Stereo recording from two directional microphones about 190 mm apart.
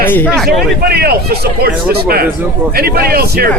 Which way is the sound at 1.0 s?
55° right (ahead or behind).